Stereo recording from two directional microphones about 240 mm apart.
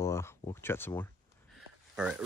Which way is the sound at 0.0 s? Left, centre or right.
Centre.